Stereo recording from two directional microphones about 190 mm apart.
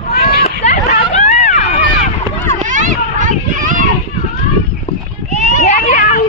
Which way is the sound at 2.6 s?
40° right (ahead or behind).